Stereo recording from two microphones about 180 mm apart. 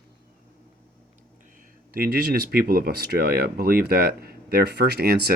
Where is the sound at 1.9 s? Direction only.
60° right (ahead or behind).